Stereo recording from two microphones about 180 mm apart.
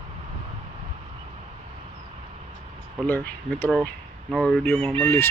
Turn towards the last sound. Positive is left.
turn(degrees=10)  # may be behind; listen again after turning